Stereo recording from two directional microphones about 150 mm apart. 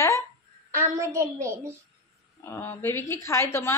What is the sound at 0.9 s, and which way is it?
Speech, 20° right (ahead or behind).